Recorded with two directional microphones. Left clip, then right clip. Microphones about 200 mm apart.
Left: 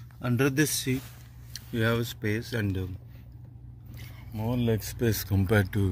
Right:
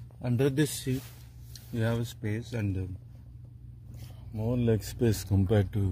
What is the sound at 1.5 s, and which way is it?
Speech, 10° right (ahead or behind).